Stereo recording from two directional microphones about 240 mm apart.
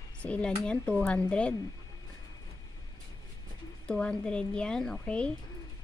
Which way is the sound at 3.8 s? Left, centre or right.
Centre.